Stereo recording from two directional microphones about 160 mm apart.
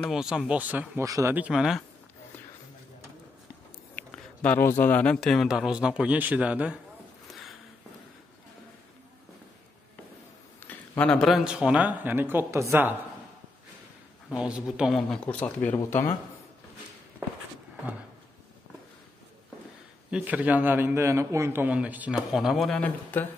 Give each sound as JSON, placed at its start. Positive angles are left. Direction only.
{"t": 0.0, "sound": "speech", "side_deg": -5}
{"t": 1.0, "sound": "speech", "side_deg": -20}
{"t": 1.3, "sound": "speech", "side_deg": -5}
{"t": 3.9, "sound": "speech", "side_deg": 10}
{"t": 7.2, "sound": "a sound", "side_deg": 0}
{"t": 10.6, "sound": "a sound", "side_deg": 15}
{"t": 11.0, "sound": "a man's voice", "side_deg": 5}
{"t": 14.3, "sound": "speech", "side_deg": -5}
{"t": 20.1, "sound": "a man's voice", "side_deg": -5}